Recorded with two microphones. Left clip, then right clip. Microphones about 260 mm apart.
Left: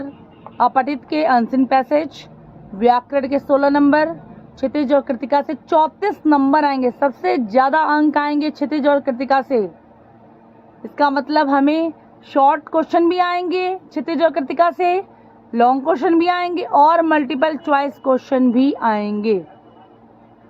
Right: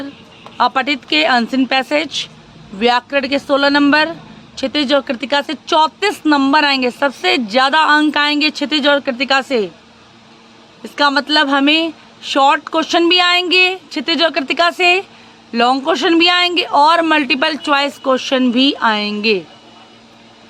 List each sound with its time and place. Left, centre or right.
0.5 s speech: right
5.3 s speech: centre
5.6 s speech: centre
9.0 s speech: centre
10.9 s speech: centre
13.5 s speech: right
14.0 s speech: centre
16.6 s speech: centre
16.9 s speech: right
18.3 s speech: centre